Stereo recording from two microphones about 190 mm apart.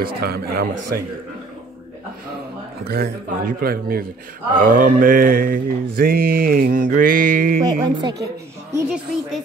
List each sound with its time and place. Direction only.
0.0 s mantra: 55° right (ahead or behind)
2.8 s mantra: 55° right (ahead or behind)
7.6 s a woman's voice: 20° right (ahead or behind)
8.8 s a woman's voice: centre (ahead or behind)